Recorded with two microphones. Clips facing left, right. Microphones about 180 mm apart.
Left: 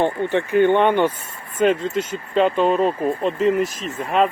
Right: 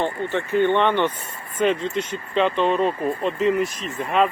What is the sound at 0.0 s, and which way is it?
Speech, 15° left (ahead or behind).